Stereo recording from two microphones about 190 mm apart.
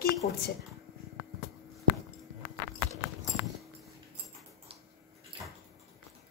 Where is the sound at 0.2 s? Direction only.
50° left (ahead or behind).